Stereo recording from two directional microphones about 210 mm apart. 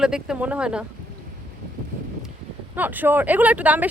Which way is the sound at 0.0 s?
5° right (ahead or behind).